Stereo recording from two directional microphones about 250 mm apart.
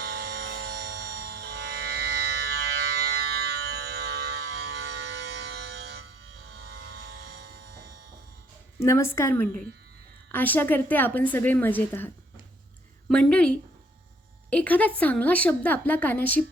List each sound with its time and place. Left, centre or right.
0.0 s music: right
3.2 s fire alarm: right
5.6 s music: right
6.4 s a sound: right
8.8 s a woman's voice: centre